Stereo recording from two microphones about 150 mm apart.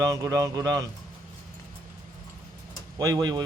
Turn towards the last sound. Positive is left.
turn(degrees=-25)  # may be behind; listen again after turning